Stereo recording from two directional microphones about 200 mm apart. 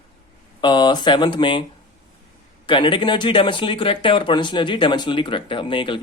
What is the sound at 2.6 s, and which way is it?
Speech, 25° left (ahead or behind).